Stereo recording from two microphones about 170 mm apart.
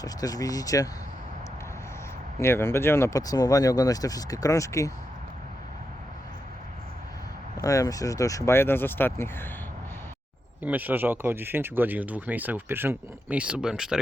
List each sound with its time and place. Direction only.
0.0 s speech: 20° left (ahead or behind)
2.4 s speech: 15° left (ahead or behind)
7.5 s speech: 20° left (ahead or behind)
10.6 s speech: 10° right (ahead or behind)